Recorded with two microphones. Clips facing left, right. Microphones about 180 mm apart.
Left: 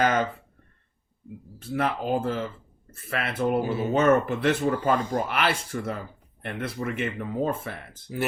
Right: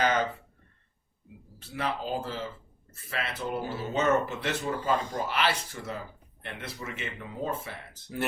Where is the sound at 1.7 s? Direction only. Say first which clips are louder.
Left 6 dB; 55° left (ahead or behind).